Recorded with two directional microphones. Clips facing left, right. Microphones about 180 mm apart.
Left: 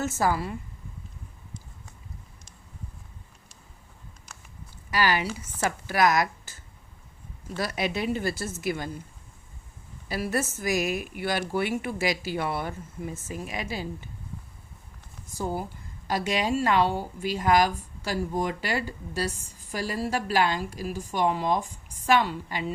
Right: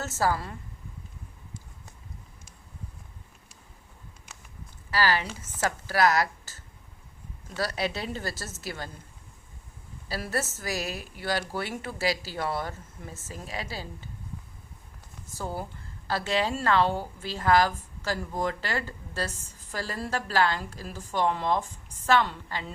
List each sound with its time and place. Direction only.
0.0 s a woman's voice: 15° left (ahead or behind)
4.9 s a woman's voice: 15° left (ahead or behind)
7.8 s a woman's voice: 15° left (ahead or behind)
10.1 s a woman's voice: 15° left (ahead or behind)
16.0 s a woman's voice: 15° left (ahead or behind)